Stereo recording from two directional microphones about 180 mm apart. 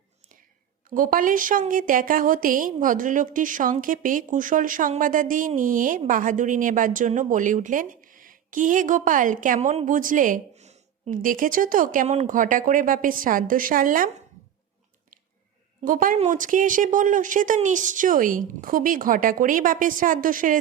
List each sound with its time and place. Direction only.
0.9 s a woman's voice: 50° right (ahead or behind)
15.8 s a woman's voice: 50° right (ahead or behind)